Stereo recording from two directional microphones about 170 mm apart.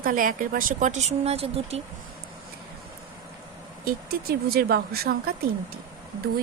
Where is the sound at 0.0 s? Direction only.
55° right (ahead or behind); by 1.8 s 35° right (ahead or behind).